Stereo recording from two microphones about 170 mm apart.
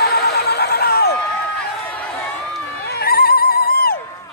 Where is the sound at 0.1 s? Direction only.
70° left (ahead or behind).